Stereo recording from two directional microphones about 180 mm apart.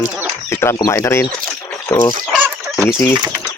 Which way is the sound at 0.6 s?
15° left (ahead or behind).